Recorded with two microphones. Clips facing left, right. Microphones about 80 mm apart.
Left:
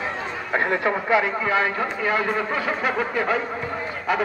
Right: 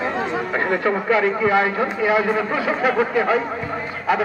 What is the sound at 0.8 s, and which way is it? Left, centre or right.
Speech, centre.